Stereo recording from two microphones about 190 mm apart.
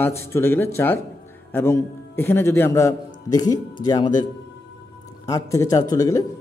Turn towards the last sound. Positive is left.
turn(degrees=20)  # may be behind; listen again after turning